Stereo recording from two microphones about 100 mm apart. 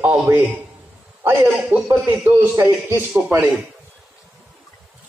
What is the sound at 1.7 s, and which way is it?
A man's voice, 20° right (ahead or behind).